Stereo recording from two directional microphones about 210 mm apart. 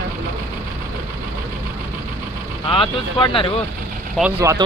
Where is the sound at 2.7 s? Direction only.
25° left (ahead or behind).